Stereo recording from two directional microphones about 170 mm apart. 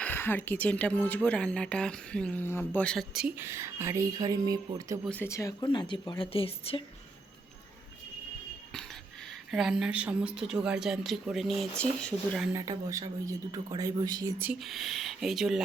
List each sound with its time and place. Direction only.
0.0 s speech: 10° left (ahead or behind); by 4.9 s 20° right (ahead or behind)
5.0 s a woman's voice: 10° left (ahead or behind); by 6.8 s 35° left (ahead or behind)
9.5 s a woman's voice: centre (ahead or behind)
12.5 s speech: 20° right (ahead or behind)
14.6 s a woman's voice: centre (ahead or behind)